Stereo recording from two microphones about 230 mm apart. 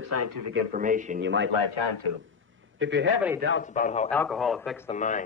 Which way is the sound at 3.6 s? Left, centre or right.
Left.